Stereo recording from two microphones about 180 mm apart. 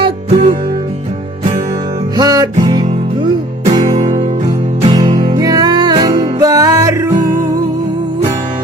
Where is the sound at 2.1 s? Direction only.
20° right (ahead or behind).